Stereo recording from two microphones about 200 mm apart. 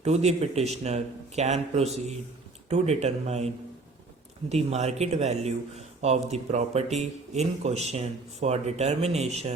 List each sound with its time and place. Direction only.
0.0 s speech: 30° right (ahead or behind)